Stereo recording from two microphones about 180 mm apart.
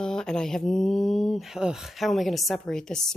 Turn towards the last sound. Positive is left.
turn(degrees=5)  # may be behind; listen again after turning